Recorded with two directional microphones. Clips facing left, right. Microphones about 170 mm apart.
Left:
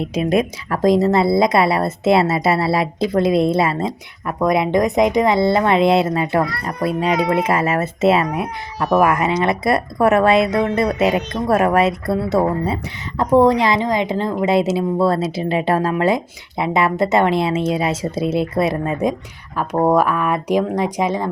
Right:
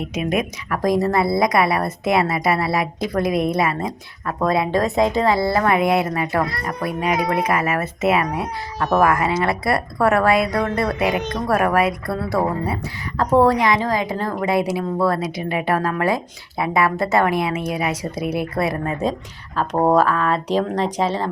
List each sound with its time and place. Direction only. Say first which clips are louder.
0.0 s speech: left 4 dB; 30° left (ahead or behind)
19.7 s speech: left 1 dB; 10° right (ahead or behind)
20.0 s speech: even; 15° left (ahead or behind)